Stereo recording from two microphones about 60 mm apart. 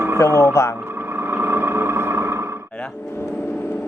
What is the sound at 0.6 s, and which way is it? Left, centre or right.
Speech, left.